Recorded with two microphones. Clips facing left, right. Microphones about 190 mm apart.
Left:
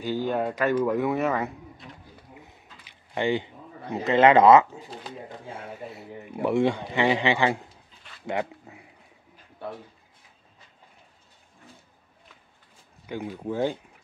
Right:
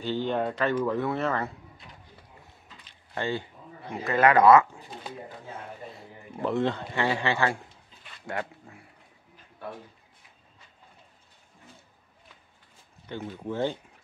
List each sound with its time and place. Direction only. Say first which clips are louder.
0.0 s speech: left 1 dB; 10° left (ahead or behind)
2.8 s a sound: left 5 dB; 15° left (ahead or behind)
3.9 s speech: left 4 dB; 25° left (ahead or behind)
5.5 s speech: left 5 dB; 10° left (ahead or behind)
13.0 s speech: left 3 dB; 10° left (ahead or behind)